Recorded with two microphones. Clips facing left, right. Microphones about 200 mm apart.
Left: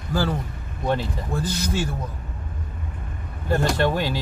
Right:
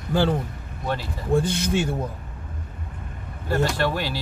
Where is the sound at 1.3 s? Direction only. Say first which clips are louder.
Right 6 dB; 25° right (ahead or behind).